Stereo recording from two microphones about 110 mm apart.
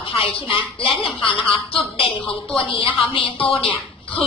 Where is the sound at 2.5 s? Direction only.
55° left (ahead or behind).